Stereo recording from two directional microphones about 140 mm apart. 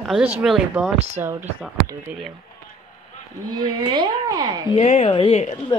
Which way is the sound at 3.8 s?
30° right (ahead or behind).